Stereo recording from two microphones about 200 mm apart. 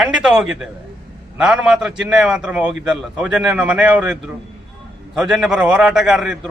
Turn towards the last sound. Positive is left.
turn(degrees=0)  # may be behind; listen again after turning